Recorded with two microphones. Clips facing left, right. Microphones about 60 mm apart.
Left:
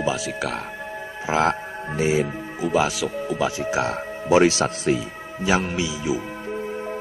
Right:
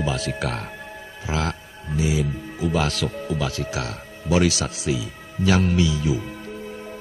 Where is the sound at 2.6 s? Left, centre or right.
Centre; by 5.0 s left.